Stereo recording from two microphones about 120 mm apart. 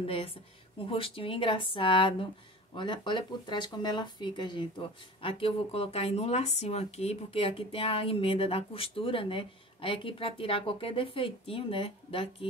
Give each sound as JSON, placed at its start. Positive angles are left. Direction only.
{"t": 0.0, "sound": "speech", "side_deg": 50}
{"t": 5.2, "sound": "speech", "side_deg": 50}